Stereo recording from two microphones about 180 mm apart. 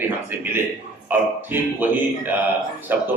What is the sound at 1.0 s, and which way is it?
A man's voice, 10° right (ahead or behind).